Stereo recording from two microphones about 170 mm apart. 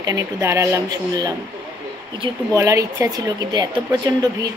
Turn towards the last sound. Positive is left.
turn(degrees=-25)  # may be behind; listen again after turning